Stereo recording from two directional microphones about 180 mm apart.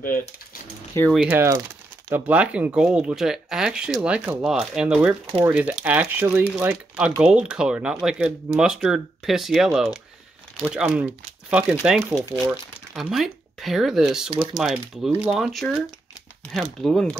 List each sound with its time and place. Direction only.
0.0 s speech: 50° left (ahead or behind)
1.1 s speech: 10° right (ahead or behind)
14.3 s speech: 25° right (ahead or behind)
14.6 s speech: 5° right (ahead or behind)
16.8 s speech: centre (ahead or behind)